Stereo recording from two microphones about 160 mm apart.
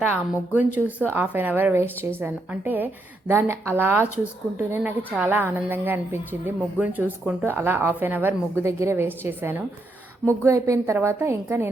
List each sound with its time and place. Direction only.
0.0 s a woman's voice: 15° right (ahead or behind)